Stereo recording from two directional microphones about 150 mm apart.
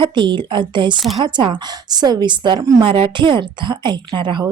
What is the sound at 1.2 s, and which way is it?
A woman's voice, 30° right (ahead or behind).